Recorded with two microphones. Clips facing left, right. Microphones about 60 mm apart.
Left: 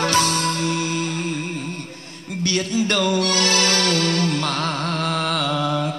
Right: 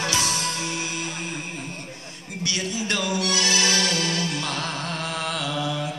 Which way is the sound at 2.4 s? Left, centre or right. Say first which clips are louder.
Left 6 dB; left.